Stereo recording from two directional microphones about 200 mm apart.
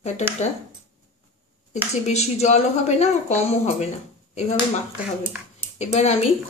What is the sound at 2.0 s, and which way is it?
Speech, 35° left (ahead or behind).